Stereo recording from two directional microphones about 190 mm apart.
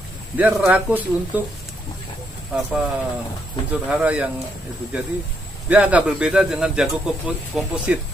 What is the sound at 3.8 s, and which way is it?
Speech, 5° right (ahead or behind).